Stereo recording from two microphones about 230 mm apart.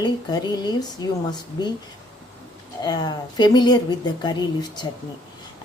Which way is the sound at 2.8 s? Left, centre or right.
Centre.